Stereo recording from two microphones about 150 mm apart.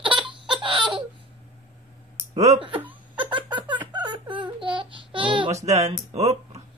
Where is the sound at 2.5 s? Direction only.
35° right (ahead or behind).